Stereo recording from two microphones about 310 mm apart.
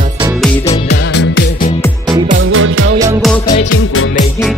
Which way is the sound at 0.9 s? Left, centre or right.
Left.